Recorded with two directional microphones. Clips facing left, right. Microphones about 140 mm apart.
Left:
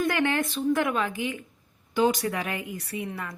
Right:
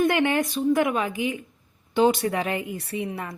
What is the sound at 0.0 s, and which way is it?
A woman's voice, 20° right (ahead or behind).